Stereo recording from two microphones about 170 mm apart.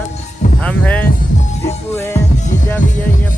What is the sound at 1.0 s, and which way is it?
Music, 55° left (ahead or behind).